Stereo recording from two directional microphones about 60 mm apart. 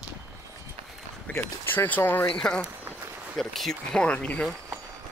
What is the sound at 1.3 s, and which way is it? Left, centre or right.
Speech, left.